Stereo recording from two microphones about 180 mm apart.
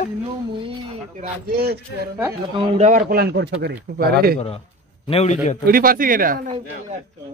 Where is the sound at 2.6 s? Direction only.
40° right (ahead or behind); by 4.3 s 65° right (ahead or behind).